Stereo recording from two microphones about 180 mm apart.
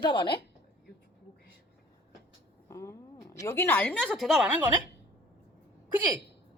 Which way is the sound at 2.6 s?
15° left (ahead or behind).